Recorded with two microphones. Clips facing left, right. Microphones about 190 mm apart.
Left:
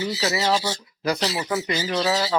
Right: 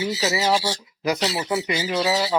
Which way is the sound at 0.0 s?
10° right (ahead or behind).